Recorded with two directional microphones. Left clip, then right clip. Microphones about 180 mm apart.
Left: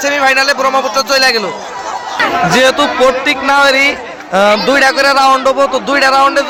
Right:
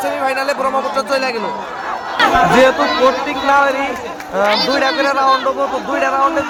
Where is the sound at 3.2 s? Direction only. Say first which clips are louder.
Left 4 dB; 25° left (ahead or behind).